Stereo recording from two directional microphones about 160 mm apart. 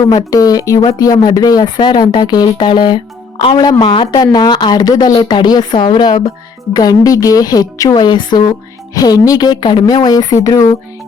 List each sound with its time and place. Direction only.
0.1 s speech: 25° left (ahead or behind)